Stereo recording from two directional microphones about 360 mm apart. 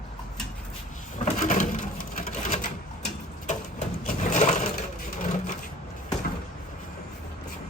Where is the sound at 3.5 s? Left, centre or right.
Centre.